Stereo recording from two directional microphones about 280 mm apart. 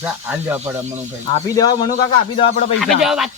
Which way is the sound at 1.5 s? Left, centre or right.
Centre.